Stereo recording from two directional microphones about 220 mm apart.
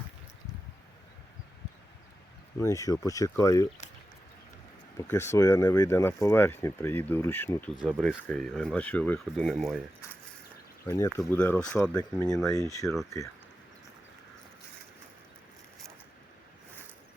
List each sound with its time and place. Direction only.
2.6 s speech: 15° left (ahead or behind)
4.9 s speech: 10° left (ahead or behind)
10.8 s speech: 15° left (ahead or behind)